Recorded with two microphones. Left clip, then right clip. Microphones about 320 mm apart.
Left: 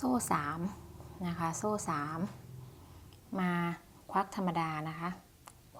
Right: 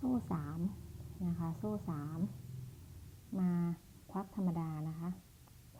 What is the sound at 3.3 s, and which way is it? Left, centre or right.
A woman's voice, centre.